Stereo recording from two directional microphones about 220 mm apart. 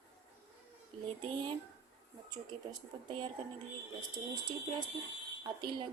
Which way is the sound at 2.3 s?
20° right (ahead or behind).